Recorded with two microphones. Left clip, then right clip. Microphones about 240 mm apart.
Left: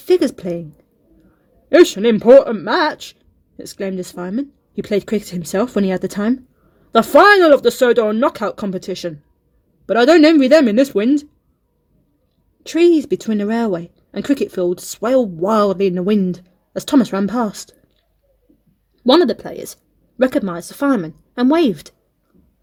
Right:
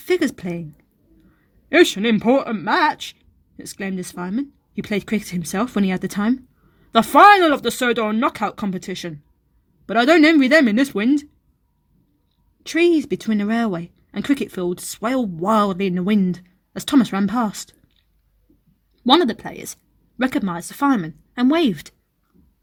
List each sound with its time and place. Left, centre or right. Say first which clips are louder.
0.0 s speech: left 5 dB; right
1.7 s speech: left 4 dB; right
12.6 s speech: left 4 dB; right
19.1 s speech: left 2 dB; right